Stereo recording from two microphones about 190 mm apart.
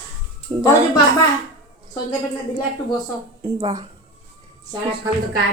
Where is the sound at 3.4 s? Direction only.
20° right (ahead or behind).